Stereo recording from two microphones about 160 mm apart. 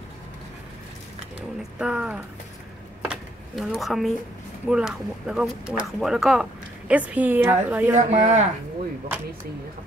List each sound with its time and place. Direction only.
1.6 s a woman's voice: 5° right (ahead or behind)
3.1 s drawer open or close: centre (ahead or behind)
4.6 s a woman's voice: 5° right (ahead or behind)
7.9 s speech: 50° right (ahead or behind)